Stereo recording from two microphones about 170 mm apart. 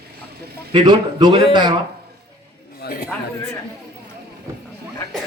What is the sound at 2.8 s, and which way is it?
Speech, 60° left (ahead or behind).